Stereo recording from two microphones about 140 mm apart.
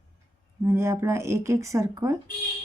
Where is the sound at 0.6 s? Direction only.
20° right (ahead or behind).